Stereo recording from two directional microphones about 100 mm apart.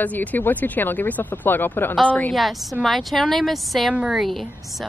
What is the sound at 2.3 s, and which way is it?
Speech, centre (ahead or behind).